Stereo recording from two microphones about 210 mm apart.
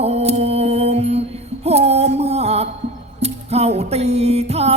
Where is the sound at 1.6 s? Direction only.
30° right (ahead or behind).